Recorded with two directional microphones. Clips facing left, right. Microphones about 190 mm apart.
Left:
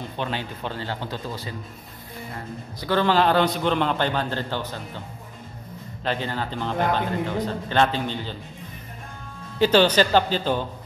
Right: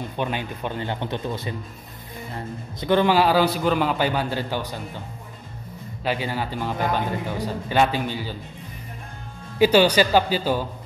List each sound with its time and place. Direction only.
0.2 s speech: 15° right (ahead or behind)
2.8 s a man's voice: 15° right (ahead or behind)
6.0 s a man's voice: 10° right (ahead or behind)
9.6 s a man's voice: 10° right (ahead or behind)